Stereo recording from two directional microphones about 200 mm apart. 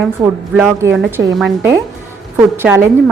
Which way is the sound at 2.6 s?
10° right (ahead or behind).